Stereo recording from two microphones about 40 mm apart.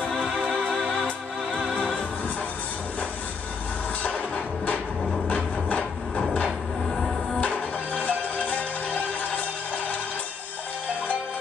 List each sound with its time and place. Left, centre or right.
0.2 s music: right
5.3 s a sound: left
6.9 s music: centre
7.3 s music: left